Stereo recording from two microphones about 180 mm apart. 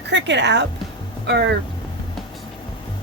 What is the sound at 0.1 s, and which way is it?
A woman's voice, 75° right (ahead or behind).